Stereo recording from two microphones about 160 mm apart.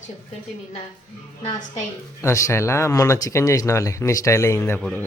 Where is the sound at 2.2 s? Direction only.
20° left (ahead or behind).